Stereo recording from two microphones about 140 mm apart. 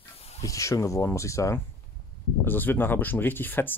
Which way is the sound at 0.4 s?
25° left (ahead or behind).